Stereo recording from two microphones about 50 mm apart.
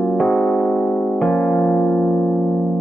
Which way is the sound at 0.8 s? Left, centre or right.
Left.